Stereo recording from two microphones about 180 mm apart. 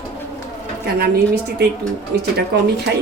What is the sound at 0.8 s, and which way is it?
Speech, 65° right (ahead or behind).